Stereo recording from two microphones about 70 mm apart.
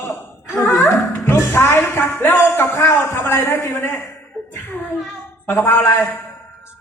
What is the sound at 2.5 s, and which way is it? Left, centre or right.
A man's voice, left.